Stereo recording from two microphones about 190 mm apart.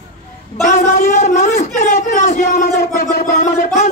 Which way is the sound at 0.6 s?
40° left (ahead or behind).